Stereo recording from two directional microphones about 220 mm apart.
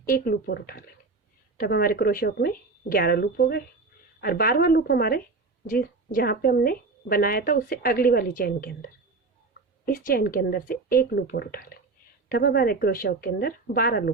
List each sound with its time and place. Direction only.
0.0 s a woman's voice: 40° left (ahead or behind)
9.8 s speech: 40° left (ahead or behind)